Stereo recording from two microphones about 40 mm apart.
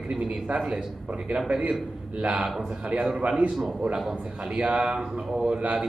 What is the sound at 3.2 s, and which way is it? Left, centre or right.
Speech, right.